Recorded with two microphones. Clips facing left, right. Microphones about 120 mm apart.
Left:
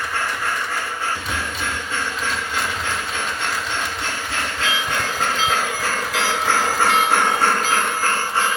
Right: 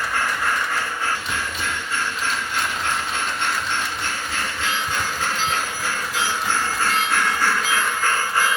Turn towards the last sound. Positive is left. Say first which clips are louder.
# left 4 dB
turn(degrees=60)  # may be behind; listen again after turning